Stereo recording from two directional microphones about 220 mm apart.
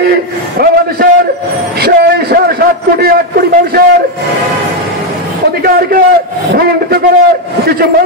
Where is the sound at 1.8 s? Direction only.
45° right (ahead or behind).